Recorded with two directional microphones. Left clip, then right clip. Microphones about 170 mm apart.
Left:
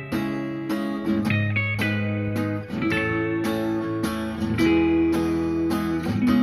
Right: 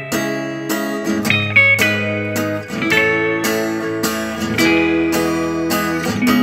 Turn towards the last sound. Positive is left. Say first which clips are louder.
# right 7 dB
turn(degrees=-25)  # may be behind; listen again after turning